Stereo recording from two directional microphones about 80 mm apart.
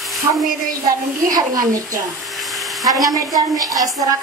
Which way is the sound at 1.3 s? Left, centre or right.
Right.